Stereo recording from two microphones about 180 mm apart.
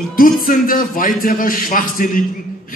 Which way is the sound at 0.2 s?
50° left (ahead or behind).